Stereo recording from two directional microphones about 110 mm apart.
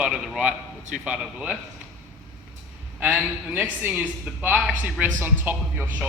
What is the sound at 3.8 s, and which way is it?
A man's voice, 20° right (ahead or behind).